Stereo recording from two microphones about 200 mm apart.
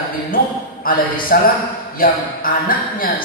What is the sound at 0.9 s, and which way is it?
A man's voice, 45° left (ahead or behind).